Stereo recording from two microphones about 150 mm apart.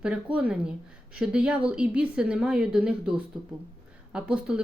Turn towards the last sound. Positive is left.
turn(degrees=-5)  # may be behind; listen again after turning